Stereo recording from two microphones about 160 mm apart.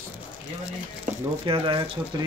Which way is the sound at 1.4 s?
30° right (ahead or behind).